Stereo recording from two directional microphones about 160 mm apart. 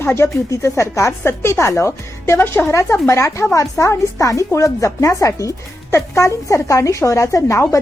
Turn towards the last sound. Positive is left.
turn(degrees=20)  # may be behind; listen again after turning